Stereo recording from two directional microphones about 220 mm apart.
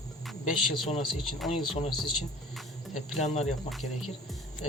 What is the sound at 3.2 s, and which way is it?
Speech, 30° left (ahead or behind).